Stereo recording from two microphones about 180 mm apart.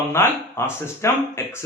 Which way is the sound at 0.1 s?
15° left (ahead or behind).